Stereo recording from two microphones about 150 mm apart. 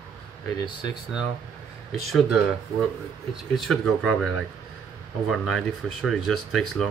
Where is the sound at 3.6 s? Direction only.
5° left (ahead or behind).